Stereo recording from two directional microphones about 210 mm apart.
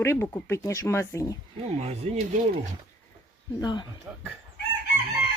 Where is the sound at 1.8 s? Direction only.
30° right (ahead or behind).